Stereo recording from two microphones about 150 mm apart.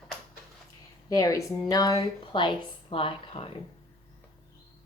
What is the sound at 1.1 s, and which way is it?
A woman's voice, 25° left (ahead or behind).